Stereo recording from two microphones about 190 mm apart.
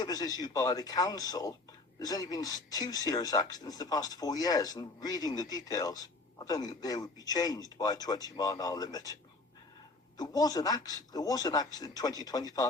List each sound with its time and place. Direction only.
0.0 s speech: 20° left (ahead or behind)
10.2 s speech: 20° left (ahead or behind)